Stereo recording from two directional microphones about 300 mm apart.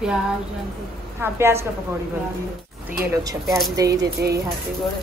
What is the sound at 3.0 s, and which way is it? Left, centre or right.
Speech, centre.